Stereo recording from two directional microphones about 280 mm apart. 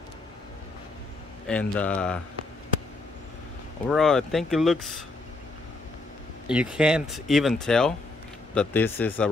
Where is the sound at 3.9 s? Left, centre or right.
Centre.